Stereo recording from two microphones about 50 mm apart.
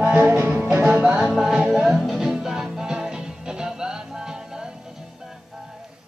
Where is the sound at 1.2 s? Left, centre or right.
Centre.